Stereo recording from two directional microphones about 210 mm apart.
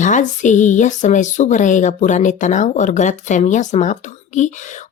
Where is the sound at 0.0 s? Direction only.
35° left (ahead or behind).